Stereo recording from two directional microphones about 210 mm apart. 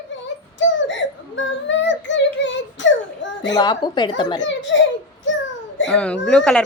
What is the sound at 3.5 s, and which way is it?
Speech, 20° left (ahead or behind).